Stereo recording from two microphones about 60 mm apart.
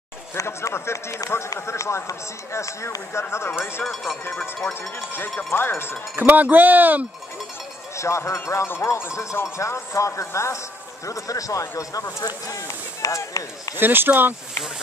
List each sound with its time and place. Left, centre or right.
0.4 s speech: left
3.8 s speech: centre
5.5 s speech: left
6.1 s speech: right
7.9 s speech: left
8.6 s speech: left
11.1 s speech: left
12.4 s a sound: left
13.7 s speech: right